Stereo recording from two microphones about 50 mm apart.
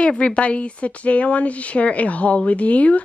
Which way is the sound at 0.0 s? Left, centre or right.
Left.